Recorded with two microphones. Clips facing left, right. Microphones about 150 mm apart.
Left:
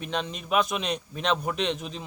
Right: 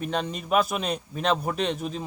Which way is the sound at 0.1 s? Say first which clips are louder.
Left 2 dB; 45° right (ahead or behind).